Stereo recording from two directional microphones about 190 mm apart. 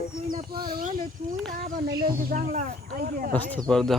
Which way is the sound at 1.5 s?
50° right (ahead or behind).